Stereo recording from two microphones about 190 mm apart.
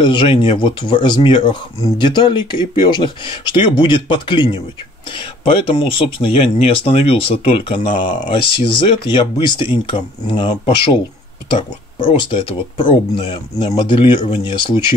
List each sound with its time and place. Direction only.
0.0 s speech: 25° left (ahead or behind)
12.0 s speech: 25° left (ahead or behind)